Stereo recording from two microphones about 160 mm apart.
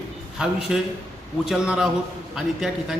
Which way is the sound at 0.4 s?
5° right (ahead or behind).